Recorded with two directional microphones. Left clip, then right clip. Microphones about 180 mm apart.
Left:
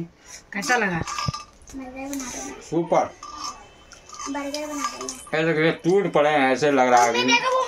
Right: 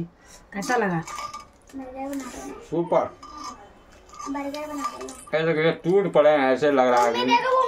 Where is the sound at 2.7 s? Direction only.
35° left (ahead or behind).